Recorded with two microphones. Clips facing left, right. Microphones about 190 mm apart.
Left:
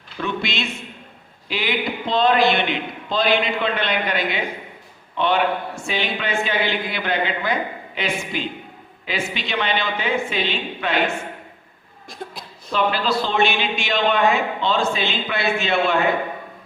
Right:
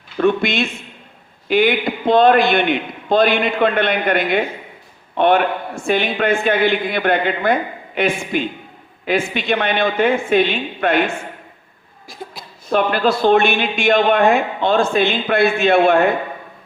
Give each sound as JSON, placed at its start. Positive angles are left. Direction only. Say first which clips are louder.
{"t": 0.2, "sound": "a man's voice", "louder": "right 9 dB", "side_deg": -50}
{"t": 12.0, "sound": "a sound", "louder": "right 1 dB", "side_deg": 0}
{"t": 12.7, "sound": "a man's voice", "louder": "right 5 dB", "side_deg": -55}